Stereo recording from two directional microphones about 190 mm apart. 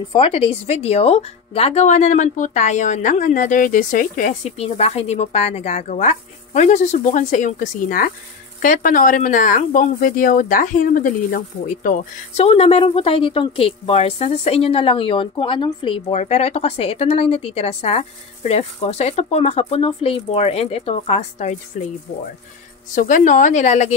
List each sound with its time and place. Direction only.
0.1 s speech: 30° left (ahead or behind)
22.9 s speech: 40° left (ahead or behind)